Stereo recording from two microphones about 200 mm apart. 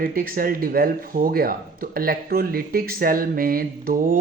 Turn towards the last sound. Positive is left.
turn(degrees=-45)  # may be behind; listen again after turning